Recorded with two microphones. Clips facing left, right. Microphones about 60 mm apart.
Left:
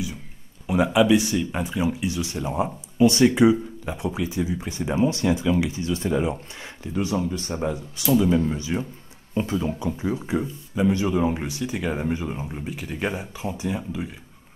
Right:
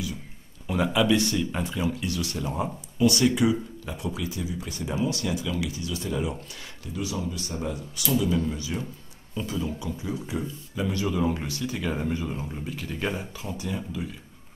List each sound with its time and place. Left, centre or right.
0.7 s speech: centre
9.3 s speech: left